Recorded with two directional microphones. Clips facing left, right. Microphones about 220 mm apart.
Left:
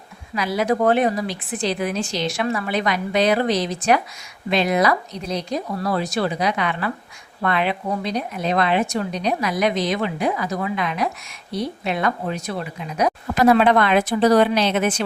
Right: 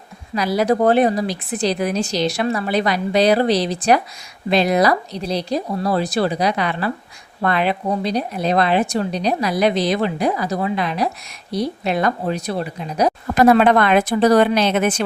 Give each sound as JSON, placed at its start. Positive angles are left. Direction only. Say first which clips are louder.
{"t": 0.3, "sound": "speech", "louder": "right 3 dB", "side_deg": -35}